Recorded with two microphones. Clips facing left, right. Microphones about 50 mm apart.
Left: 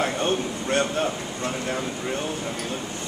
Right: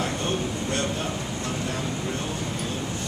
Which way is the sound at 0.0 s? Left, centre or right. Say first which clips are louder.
Left 3 dB; left.